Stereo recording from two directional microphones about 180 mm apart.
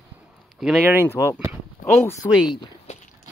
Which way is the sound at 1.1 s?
15° left (ahead or behind).